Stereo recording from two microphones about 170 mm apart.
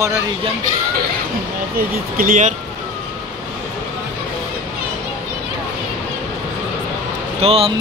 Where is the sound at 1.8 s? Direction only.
60° right (ahead or behind).